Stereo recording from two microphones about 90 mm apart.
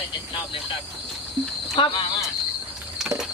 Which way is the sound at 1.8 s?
75° left (ahead or behind).